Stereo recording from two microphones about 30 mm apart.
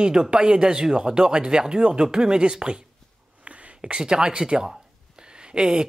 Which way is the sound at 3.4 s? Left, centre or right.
Right.